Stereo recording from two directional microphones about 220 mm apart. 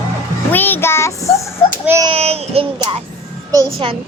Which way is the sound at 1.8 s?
10° right (ahead or behind).